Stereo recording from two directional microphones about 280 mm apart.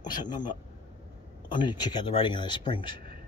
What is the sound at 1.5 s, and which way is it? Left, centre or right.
Speech, centre.